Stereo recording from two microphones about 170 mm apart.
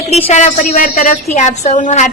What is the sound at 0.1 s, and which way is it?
A woman's voice, 40° left (ahead or behind).